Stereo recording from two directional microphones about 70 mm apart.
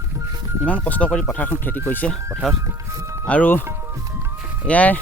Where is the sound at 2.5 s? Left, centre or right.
Right.